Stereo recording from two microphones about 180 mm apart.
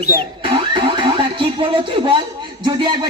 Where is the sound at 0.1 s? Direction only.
25° right (ahead or behind).